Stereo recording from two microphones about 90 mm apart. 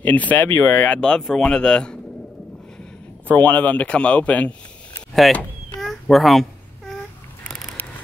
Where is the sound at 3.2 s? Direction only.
15° left (ahead or behind).